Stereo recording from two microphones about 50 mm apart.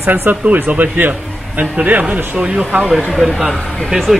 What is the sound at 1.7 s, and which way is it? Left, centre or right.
Speech, right.